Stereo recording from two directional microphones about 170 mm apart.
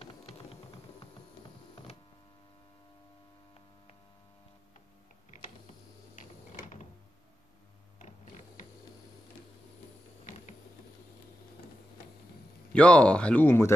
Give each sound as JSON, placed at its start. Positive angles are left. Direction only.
{"t": 0.0, "sound": "typing", "side_deg": 35}
{"t": 12.7, "sound": "speech", "side_deg": 5}